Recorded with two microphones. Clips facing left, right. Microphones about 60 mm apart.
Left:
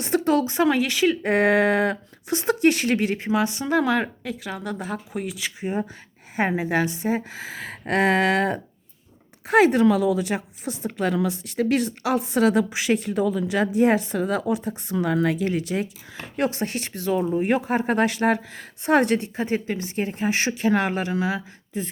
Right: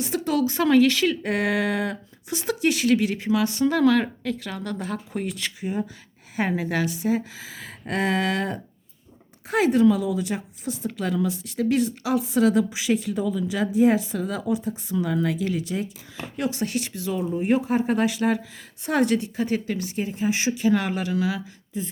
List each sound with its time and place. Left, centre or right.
0.0 s a woman's voice: left
0.4 s speech: left
1.2 s speech: left
2.4 s speech: left; by 5.5 s centre
5.5 s a woman's voice: left
16.4 s speech: left
17.4 s a woman's voice: left
19.5 s speech: left
20.0 s a woman's voice: left
21.7 s a woman's voice: left